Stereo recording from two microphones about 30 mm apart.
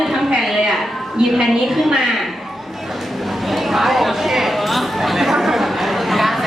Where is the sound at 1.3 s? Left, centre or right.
Centre.